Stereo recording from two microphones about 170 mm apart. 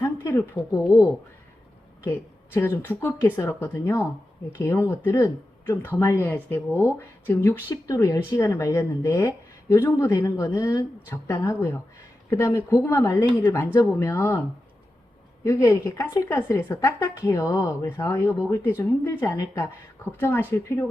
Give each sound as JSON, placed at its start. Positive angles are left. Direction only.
{"t": 0.0, "sound": "speech", "side_deg": 15}
{"t": 2.0, "sound": "a woman's voice", "side_deg": 15}
{"t": 15.4, "sound": "a woman's voice", "side_deg": 20}